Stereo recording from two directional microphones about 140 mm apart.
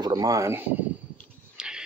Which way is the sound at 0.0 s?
25° right (ahead or behind).